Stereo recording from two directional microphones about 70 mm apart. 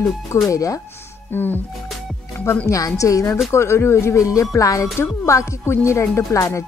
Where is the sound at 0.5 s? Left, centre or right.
Left.